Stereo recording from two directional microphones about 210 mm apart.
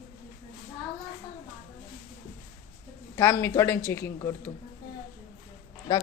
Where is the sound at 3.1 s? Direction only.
10° left (ahead or behind).